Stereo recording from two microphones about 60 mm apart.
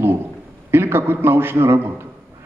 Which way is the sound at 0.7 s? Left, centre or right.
Right.